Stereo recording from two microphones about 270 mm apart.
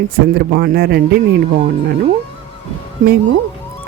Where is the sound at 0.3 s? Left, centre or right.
Right.